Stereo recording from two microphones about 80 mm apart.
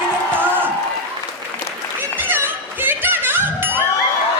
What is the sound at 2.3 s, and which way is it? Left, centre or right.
Chuckle, right.